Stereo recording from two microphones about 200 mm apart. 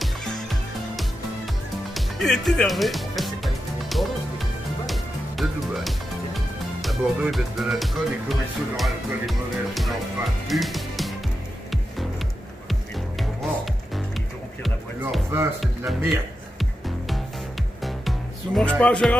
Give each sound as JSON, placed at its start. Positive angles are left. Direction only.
{"t": 0.0, "sound": "music", "side_deg": 0}
{"t": 5.4, "sound": "speech", "side_deg": 0}
{"t": 10.5, "sound": "music", "side_deg": 0}
{"t": 12.6, "sound": "music", "side_deg": 0}
{"t": 14.6, "sound": "music", "side_deg": 0}
{"t": 15.6, "sound": "speech", "side_deg": 0}
{"t": 17.8, "sound": "music", "side_deg": 0}